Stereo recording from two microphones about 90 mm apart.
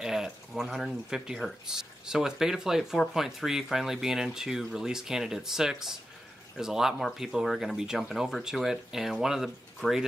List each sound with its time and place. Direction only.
0.0 s speech: 5° right (ahead or behind)
9.8 s speech: 20° left (ahead or behind)